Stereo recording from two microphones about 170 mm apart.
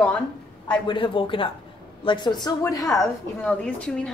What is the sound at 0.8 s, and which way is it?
Speech, 30° left (ahead or behind).